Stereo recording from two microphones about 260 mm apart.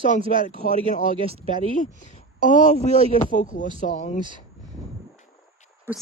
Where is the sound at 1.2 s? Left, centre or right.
Right.